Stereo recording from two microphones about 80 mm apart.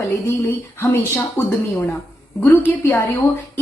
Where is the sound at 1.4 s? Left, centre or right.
Left.